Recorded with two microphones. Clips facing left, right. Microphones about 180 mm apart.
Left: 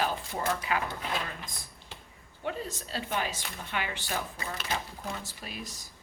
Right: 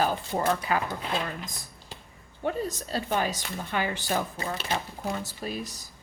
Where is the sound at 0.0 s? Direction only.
40° right (ahead or behind).